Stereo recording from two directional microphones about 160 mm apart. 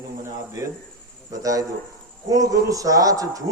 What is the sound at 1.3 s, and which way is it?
Speech, 20° right (ahead or behind).